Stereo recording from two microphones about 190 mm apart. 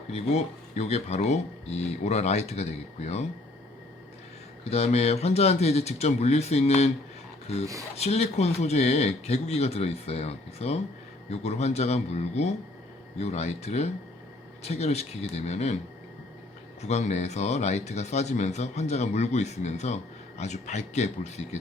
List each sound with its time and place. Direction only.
0.1 s speech: 35° left (ahead or behind)
4.7 s speech: 35° left (ahead or behind)
7.9 s speech: 35° left (ahead or behind)
16.8 s speech: 35° left (ahead or behind)